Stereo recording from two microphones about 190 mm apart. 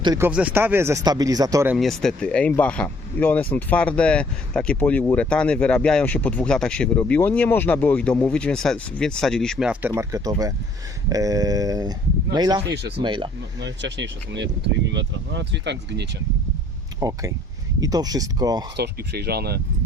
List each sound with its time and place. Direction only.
0.0 s speech: 20° right (ahead or behind)
0.3 s speech: 5° right (ahead or behind)
1.7 s speech: centre (ahead or behind)
9.9 s speech: 15° right (ahead or behind)
13.6 s speech: 70° right (ahead or behind)
17.0 s speech: 20° right (ahead or behind)
18.8 s speech: 55° right (ahead or behind)